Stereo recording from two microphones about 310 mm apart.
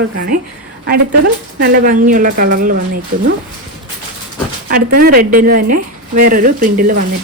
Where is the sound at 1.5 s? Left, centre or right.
Right.